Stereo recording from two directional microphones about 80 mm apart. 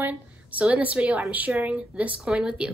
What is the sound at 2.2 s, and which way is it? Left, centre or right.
Speech, centre.